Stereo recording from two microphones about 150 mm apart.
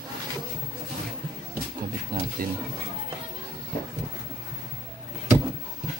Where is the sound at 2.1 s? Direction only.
75° right (ahead or behind).